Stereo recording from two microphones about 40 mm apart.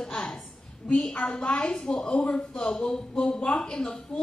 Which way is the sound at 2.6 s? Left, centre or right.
Centre.